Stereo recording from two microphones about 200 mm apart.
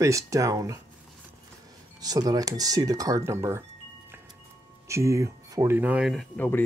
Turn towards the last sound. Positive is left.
turn(degrees=10)  # may be behind; listen again after turning